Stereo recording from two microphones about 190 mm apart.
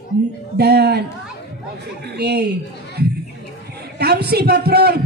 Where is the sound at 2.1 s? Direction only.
60° right (ahead or behind).